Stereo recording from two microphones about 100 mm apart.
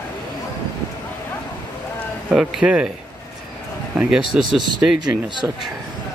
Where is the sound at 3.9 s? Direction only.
5° right (ahead or behind).